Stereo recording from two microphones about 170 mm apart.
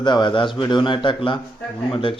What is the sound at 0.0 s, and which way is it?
A man's voice, 25° left (ahead or behind).